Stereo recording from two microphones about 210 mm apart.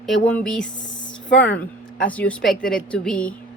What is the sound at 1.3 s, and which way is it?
Speech, 55° left (ahead or behind).